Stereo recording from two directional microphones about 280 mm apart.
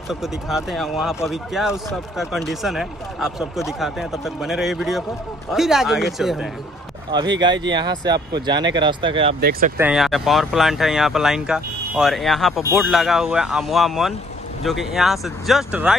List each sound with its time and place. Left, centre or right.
0.1 s speech: centre
7.1 s speech: centre
9.4 s speech: right
9.8 s speech: centre